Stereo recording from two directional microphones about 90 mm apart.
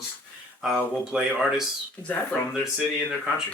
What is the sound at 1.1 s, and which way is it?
Speech, 5° right (ahead or behind).